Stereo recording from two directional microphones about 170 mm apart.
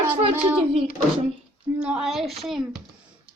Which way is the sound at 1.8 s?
5° right (ahead or behind).